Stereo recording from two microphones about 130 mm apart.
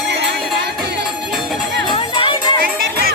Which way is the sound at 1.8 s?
40° left (ahead or behind).